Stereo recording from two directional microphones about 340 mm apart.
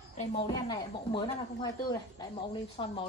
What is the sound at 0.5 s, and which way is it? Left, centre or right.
Speech, centre.